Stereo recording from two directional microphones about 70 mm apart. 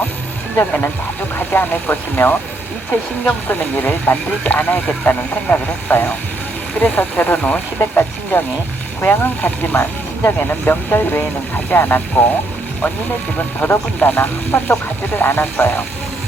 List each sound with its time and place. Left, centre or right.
0.5 s speech: left
13.6 s speech: left